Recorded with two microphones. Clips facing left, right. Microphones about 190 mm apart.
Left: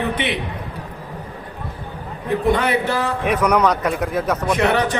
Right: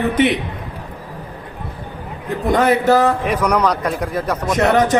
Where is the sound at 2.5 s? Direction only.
45° right (ahead or behind).